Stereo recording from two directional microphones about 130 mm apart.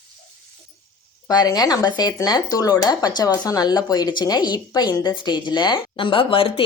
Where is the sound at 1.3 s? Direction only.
30° left (ahead or behind).